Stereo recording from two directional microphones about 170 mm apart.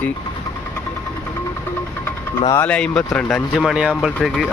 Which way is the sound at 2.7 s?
5° left (ahead or behind).